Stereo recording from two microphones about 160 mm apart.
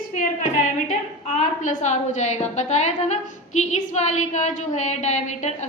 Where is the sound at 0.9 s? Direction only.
50° left (ahead or behind).